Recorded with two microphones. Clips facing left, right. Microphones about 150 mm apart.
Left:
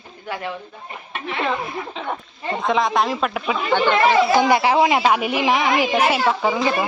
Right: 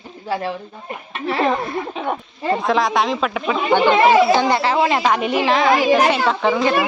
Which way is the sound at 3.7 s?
15° right (ahead or behind).